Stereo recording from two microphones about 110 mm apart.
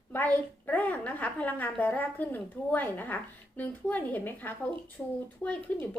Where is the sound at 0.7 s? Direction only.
15° left (ahead or behind).